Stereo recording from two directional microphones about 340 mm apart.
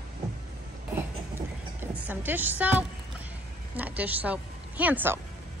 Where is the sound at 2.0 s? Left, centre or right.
Centre.